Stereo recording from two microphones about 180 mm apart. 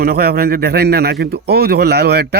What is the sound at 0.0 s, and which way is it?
Speech, 60° right (ahead or behind).